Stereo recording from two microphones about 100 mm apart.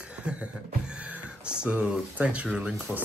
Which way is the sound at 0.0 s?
10° right (ahead or behind).